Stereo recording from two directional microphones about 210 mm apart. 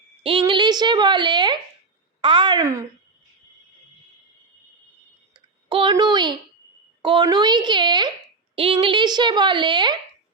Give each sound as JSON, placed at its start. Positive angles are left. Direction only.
{"t": 0.2, "sound": "a woman's voice", "side_deg": -25}
{"t": 5.6, "sound": "a woman's voice", "side_deg": -25}